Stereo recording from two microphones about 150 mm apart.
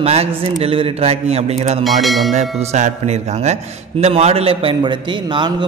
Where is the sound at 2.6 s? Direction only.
45° right (ahead or behind).